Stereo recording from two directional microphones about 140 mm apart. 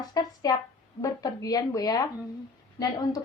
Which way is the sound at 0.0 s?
30° left (ahead or behind).